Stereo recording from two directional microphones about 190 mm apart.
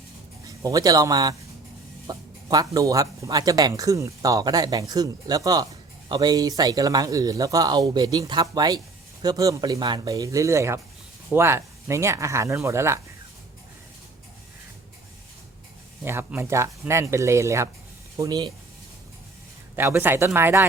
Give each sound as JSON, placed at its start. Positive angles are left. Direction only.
{"t": 0.4, "sound": "speech", "side_deg": -20}
{"t": 16.0, "sound": "speech", "side_deg": -10}
{"t": 19.7, "sound": "speech", "side_deg": -10}